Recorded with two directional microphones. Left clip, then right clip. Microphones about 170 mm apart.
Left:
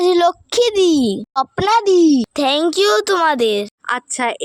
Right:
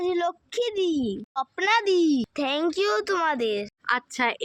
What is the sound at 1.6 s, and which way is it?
Speech, 50° left (ahead or behind).